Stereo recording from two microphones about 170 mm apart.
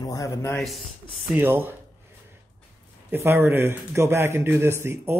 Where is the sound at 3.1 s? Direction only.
15° right (ahead or behind).